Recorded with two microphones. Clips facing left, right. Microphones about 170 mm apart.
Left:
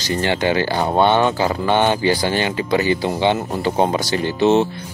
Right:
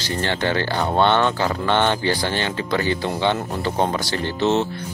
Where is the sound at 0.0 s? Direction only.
15° left (ahead or behind).